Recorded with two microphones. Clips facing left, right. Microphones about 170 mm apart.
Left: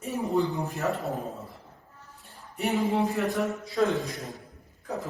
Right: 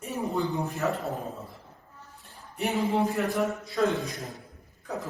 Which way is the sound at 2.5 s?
Centre (ahead or behind).